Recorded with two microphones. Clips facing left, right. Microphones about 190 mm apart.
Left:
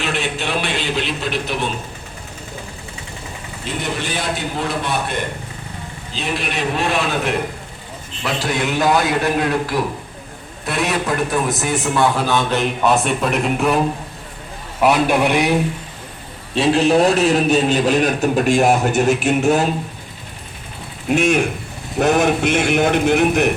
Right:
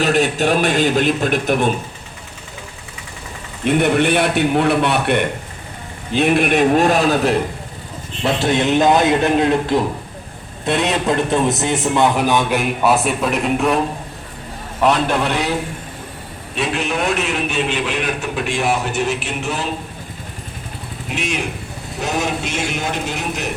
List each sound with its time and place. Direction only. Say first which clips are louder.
0.0 s a man's voice: right 7 dB; 40° right (ahead or behind)
3.6 s a man's voice: right 10 dB; 60° right (ahead or behind); by 7.3 s 40° right (ahead or behind)
8.2 s a man's voice: right 4 dB; 25° right (ahead or behind); by 15.5 s 15° left (ahead or behind)
16.6 s a man's voice: left 7 dB; 30° left (ahead or behind)
21.1 s a man's voice: left 8 dB; 50° left (ahead or behind)